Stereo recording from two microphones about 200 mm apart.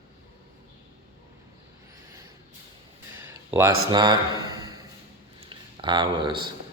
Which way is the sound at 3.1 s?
10° right (ahead or behind).